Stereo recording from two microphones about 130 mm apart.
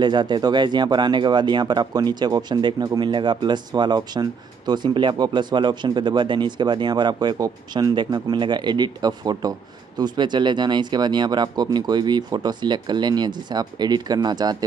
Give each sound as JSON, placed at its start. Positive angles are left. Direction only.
{"t": 0.0, "sound": "speech", "side_deg": -35}